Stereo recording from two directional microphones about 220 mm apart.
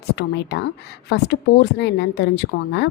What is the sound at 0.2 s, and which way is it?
A woman's voice, 50° left (ahead or behind).